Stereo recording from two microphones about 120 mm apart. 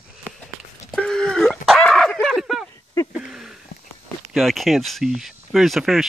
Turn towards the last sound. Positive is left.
turn(degrees=0)  # may be behind; listen again after turning